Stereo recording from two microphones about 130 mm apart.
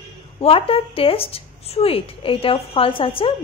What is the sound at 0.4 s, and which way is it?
Speech, 45° left (ahead or behind).